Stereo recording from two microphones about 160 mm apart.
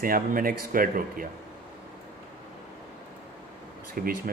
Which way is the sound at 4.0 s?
65° right (ahead or behind).